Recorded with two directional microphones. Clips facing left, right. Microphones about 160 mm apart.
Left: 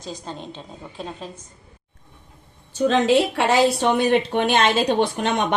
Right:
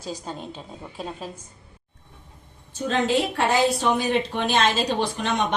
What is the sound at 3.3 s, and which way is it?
A woman's voice, 70° left (ahead or behind).